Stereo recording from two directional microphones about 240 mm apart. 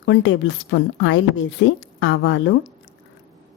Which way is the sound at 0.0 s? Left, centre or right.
Left.